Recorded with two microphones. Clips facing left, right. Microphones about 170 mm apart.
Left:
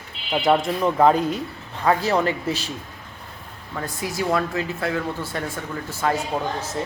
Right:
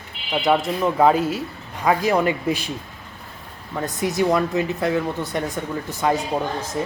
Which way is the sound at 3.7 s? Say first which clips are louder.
Right 5 dB; 20° right (ahead or behind).